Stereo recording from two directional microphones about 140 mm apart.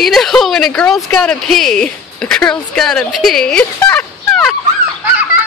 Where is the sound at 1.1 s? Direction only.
5° left (ahead or behind).